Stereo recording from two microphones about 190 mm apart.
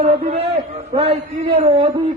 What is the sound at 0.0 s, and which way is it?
A man's voice, 35° right (ahead or behind).